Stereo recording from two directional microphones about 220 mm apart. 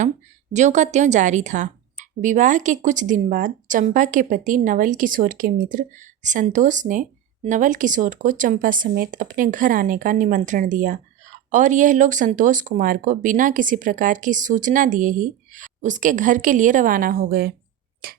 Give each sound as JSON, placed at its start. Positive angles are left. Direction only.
{"t": 0.5, "sound": "speech", "side_deg": -35}
{"t": 18.0, "sound": "tick-tock", "side_deg": -45}